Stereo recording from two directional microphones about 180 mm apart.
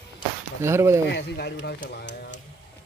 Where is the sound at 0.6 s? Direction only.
15° right (ahead or behind).